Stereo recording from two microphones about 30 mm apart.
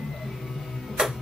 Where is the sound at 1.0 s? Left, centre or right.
Right.